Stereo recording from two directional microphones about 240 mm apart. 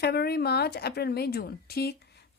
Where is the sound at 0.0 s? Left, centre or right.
Left.